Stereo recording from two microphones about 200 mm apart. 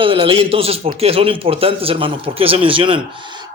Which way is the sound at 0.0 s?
25° right (ahead or behind).